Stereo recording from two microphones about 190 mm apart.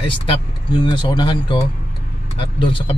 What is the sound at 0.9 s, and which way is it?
Speech, 25° left (ahead or behind).